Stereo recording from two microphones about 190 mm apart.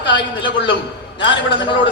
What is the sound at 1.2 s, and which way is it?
Speech, 25° left (ahead or behind).